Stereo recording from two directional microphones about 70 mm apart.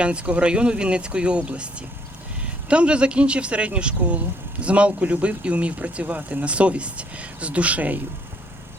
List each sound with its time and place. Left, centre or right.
0.0 s a man's voice: centre